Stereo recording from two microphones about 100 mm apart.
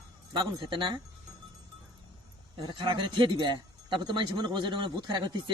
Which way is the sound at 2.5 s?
55° right (ahead or behind).